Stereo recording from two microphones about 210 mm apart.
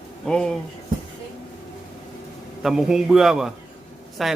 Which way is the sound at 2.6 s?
Centre (ahead or behind).